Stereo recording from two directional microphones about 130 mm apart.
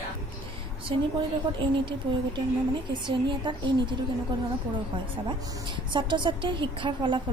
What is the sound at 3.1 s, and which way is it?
Speech, 40° right (ahead or behind).